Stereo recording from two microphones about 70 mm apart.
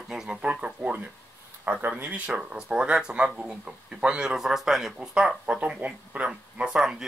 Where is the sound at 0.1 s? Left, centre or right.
Centre.